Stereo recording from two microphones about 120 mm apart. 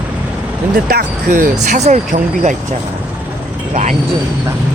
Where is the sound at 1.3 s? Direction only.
80° right.